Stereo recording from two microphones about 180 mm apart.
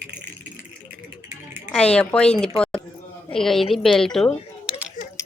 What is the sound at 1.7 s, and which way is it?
A woman's voice, 5° left (ahead or behind).